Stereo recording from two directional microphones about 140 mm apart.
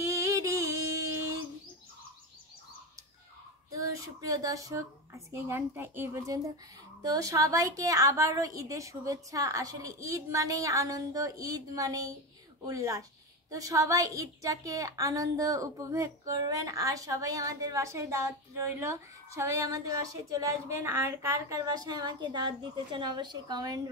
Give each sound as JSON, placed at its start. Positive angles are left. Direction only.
{"t": 0.0, "sound": "music", "side_deg": -25}
{"t": 3.7, "sound": "a woman's voice", "side_deg": -25}